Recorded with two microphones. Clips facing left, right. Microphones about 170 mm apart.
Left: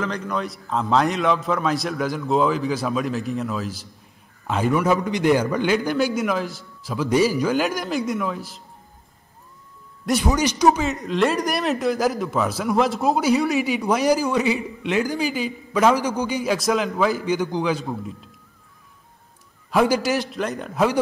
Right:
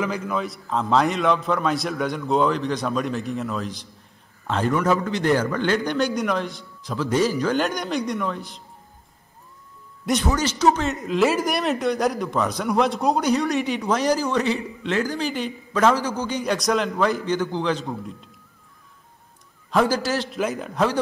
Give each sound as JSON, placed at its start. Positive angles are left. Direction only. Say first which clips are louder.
{"t": 0.0, "sound": "a man's voice", "louder": "right 1 dB", "side_deg": -5}
{"t": 5.8, "sound": "a man's voice", "louder": "left 1 dB", "side_deg": 5}
{"t": 10.3, "sound": "a man's voice", "louder": "left 2 dB", "side_deg": 15}
{"t": 10.8, "sound": "a man's voice", "louder": "even", "side_deg": 0}
{"t": 19.7, "sound": "a man's voice", "louder": "left 2 dB", "side_deg": 10}
{"t": 20.2, "sound": "a man's voice", "louder": "right 1 dB", "side_deg": -5}